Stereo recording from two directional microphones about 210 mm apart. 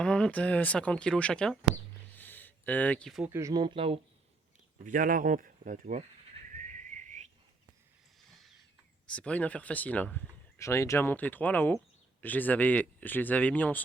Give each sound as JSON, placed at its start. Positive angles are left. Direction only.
{"t": 0.0, "sound": "speech", "side_deg": 5}
{"t": 2.1, "sound": "a sound", "side_deg": 10}
{"t": 3.2, "sound": "speech", "side_deg": -15}
{"t": 4.8, "sound": "speech", "side_deg": -40}
{"t": 6.5, "sound": "whistling", "side_deg": -35}
{"t": 8.3, "sound": "a sound", "side_deg": 0}
{"t": 9.0, "sound": "speech", "side_deg": 5}